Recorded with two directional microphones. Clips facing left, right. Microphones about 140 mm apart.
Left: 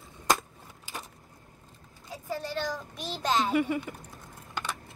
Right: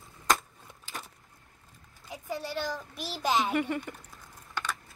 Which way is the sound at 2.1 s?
10° right (ahead or behind).